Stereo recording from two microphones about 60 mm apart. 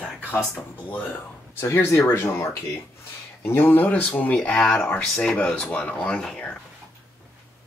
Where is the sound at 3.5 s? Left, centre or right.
Left.